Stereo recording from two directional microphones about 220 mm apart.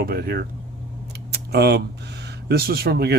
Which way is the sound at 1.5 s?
50° right (ahead or behind).